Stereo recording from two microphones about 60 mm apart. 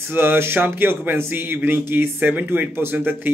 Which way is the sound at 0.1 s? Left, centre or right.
Right.